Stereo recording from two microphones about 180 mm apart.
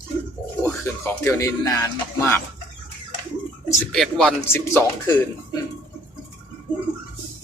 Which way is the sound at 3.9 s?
5° left (ahead or behind).